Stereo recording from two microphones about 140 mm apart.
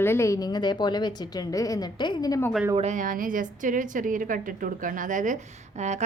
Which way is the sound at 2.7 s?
60° right (ahead or behind).